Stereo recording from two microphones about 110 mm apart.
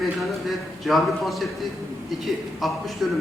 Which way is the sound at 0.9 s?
Centre (ahead or behind).